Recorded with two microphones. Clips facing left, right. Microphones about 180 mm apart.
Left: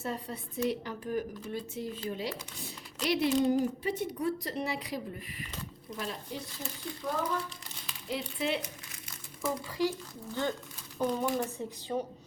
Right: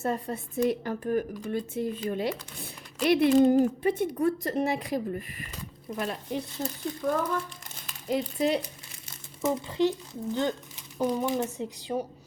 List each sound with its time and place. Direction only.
0.0 s a woman's voice: 50° right (ahead or behind)
6.0 s a woman's voice: 60° right (ahead or behind)
6.6 s a woman's voice: 50° right (ahead or behind)
9.4 s a child's voice: 25° right (ahead or behind)
10.9 s speech: 15° right (ahead or behind)